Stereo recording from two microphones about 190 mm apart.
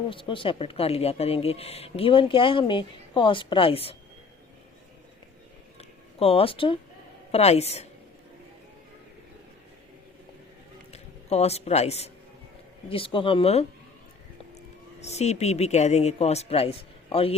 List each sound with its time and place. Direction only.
0.1 s speech: 25° left (ahead or behind)
5.7 s a sound: 30° left (ahead or behind)
7.3 s speech: 35° left (ahead or behind)
10.9 s a man's voice: 35° left (ahead or behind)
15.0 s speech: 35° left (ahead or behind)